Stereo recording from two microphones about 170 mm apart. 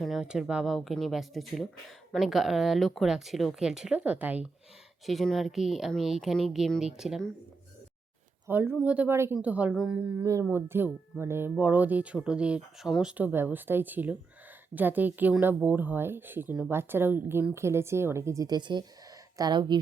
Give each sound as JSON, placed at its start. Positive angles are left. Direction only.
{"t": 0.0, "sound": "speech", "side_deg": -5}
{"t": 8.4, "sound": "speech", "side_deg": -10}